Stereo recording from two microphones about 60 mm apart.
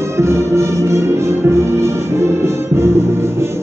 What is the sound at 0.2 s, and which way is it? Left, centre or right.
Music, right.